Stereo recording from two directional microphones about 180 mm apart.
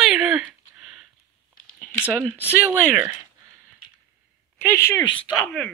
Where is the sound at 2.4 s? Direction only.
10° right (ahead or behind).